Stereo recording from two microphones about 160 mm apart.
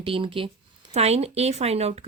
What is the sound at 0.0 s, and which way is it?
Speech, 35° right (ahead or behind).